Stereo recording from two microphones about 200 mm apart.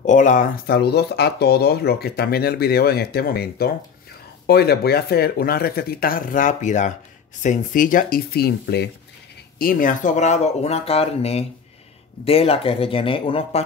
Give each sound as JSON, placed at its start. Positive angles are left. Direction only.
{"t": 0.0, "sound": "speech", "side_deg": 40}
{"t": 0.7, "sound": "speech", "side_deg": 55}
{"t": 9.6, "sound": "speech", "side_deg": 45}